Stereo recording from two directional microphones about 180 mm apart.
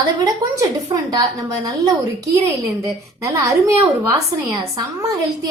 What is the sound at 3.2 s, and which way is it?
A woman's voice, 15° right (ahead or behind).